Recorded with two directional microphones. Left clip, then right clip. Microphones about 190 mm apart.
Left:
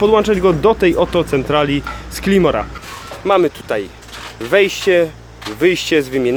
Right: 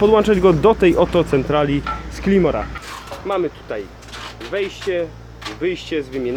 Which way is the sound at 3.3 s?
55° left (ahead or behind).